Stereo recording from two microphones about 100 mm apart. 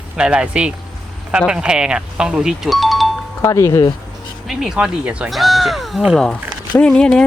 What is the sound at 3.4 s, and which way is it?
Speech, 30° left (ahead or behind).